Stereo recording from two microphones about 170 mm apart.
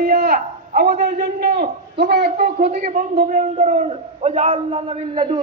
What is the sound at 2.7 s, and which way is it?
A man's voice, 50° right (ahead or behind).